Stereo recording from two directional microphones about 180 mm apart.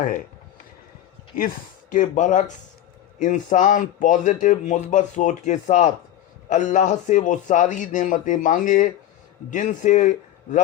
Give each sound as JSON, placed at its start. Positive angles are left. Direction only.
{"t": 1.9, "sound": "speech", "side_deg": 45}